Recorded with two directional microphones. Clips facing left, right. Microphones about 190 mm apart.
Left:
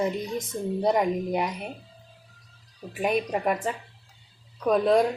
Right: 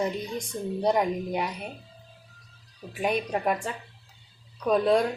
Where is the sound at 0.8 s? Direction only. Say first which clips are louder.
Left 1 dB; centre (ahead or behind).